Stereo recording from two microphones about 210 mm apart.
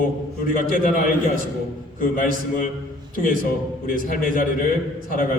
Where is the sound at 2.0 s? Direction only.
40° left (ahead or behind).